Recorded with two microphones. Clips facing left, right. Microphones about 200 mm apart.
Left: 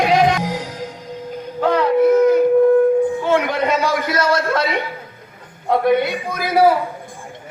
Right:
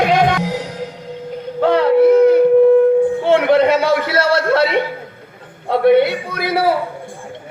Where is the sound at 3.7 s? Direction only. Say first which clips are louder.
Right 4 dB; 30° right (ahead or behind).